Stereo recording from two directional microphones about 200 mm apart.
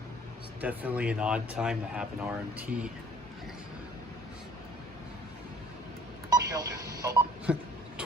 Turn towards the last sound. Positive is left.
turn(degrees=-15)  # may be behind; listen again after turning